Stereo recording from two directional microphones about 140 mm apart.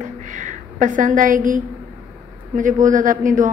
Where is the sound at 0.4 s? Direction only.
65° right (ahead or behind).